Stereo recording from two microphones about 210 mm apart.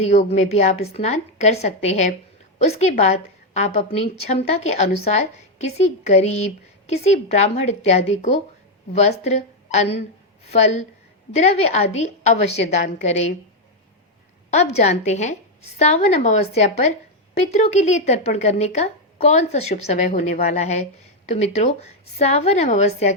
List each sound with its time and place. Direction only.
0.2 s a woman's voice: 30° left (ahead or behind)
11.3 s a woman's voice: 30° left (ahead or behind)
14.5 s a woman's voice: 35° left (ahead or behind)